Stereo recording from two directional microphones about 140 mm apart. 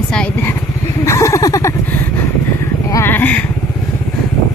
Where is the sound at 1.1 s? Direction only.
20° left (ahead or behind).